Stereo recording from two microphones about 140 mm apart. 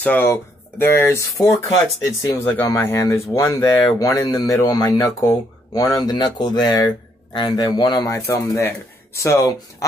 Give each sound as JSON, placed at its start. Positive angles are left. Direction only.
{"t": 0.0, "sound": "speech", "side_deg": 15}